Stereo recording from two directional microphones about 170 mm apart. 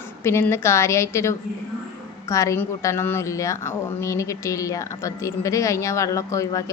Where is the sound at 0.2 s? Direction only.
15° left (ahead or behind).